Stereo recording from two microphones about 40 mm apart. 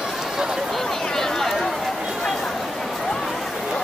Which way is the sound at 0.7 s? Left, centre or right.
Centre.